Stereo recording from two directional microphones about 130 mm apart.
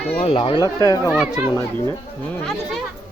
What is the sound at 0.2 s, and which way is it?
Speech, 45° left (ahead or behind).